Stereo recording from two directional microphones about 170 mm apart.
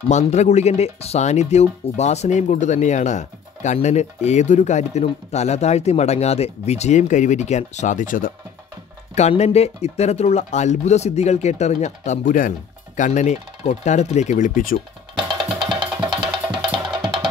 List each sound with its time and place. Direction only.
0.1 s speech: 40° left (ahead or behind)
15.8 s music: 25° right (ahead or behind)